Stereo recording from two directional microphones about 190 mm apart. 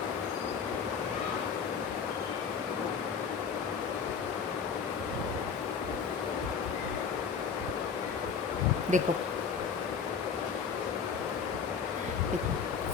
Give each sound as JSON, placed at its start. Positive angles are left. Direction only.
{"t": 8.9, "sound": "speech", "side_deg": -40}